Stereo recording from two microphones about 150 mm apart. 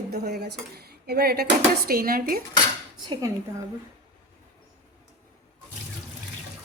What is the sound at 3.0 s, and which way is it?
Speech, 30° right (ahead or behind).